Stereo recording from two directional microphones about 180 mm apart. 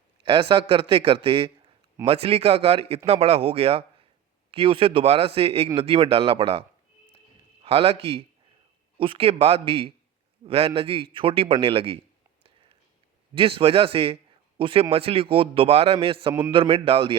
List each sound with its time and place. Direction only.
0.2 s a man's voice: 30° right (ahead or behind)
13.3 s a man's voice: 30° right (ahead or behind)